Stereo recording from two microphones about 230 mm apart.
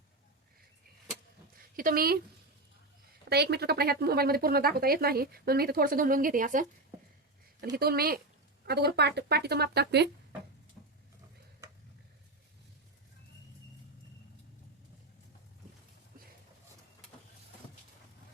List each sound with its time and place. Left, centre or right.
1.7 s a woman's voice: right
3.2 s speech: right
7.8 s speech: right